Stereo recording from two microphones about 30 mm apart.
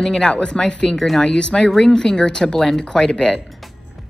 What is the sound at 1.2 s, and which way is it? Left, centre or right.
Speech, left.